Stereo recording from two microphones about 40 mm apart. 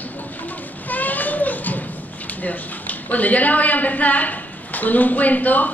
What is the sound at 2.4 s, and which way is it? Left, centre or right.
A woman's voice, left.